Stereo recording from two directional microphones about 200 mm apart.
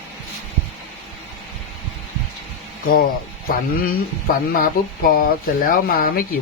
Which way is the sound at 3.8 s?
45° left (ahead or behind).